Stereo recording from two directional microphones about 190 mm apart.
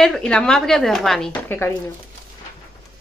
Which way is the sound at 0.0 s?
5° left (ahead or behind).